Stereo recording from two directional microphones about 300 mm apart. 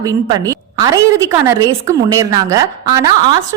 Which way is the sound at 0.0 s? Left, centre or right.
Centre.